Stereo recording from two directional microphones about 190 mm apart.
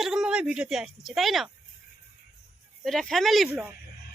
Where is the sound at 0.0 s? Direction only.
Centre (ahead or behind).